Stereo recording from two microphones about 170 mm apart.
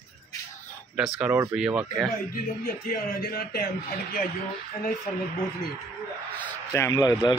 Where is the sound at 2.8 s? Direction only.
60° left (ahead or behind).